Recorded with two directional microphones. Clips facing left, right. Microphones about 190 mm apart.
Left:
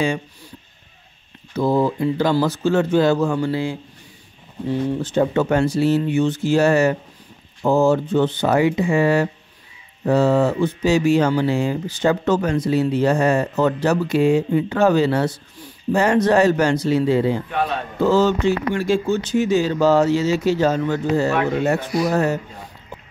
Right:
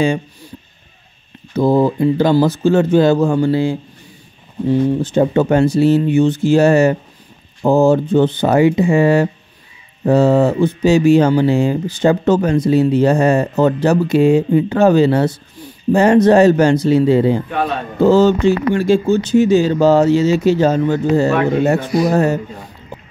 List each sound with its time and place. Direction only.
1.5 s speech: 25° right (ahead or behind)
4.6 s speech: 15° right (ahead or behind)